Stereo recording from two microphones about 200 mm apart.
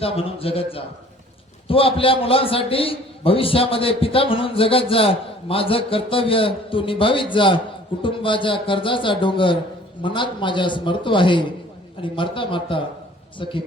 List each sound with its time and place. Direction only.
0.0 s a man's voice: 30° left (ahead or behind)